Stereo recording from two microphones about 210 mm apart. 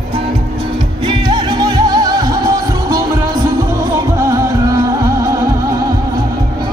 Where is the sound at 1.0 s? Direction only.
20° right (ahead or behind).